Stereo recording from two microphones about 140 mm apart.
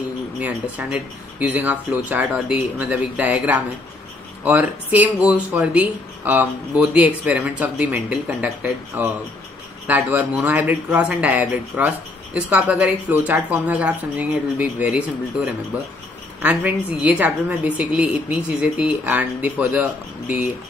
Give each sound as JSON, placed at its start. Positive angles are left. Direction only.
{"t": 0.4, "sound": "speech", "side_deg": -10}
{"t": 9.8, "sound": "speech", "side_deg": -10}